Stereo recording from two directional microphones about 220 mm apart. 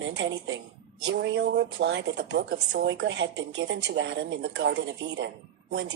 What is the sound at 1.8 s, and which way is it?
A woman's voice, 55° right (ahead or behind).